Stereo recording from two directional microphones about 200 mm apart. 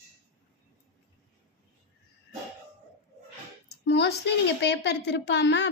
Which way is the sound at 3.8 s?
60° left (ahead or behind).